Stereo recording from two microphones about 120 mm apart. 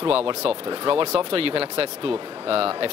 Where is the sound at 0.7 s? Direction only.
45° right (ahead or behind).